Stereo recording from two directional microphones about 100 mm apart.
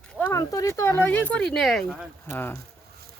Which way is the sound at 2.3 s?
20° left (ahead or behind).